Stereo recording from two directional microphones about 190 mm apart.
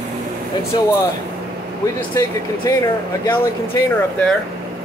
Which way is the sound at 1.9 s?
20° left (ahead or behind).